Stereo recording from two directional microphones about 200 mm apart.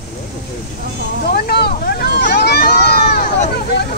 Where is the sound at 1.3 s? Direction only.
50° left (ahead or behind).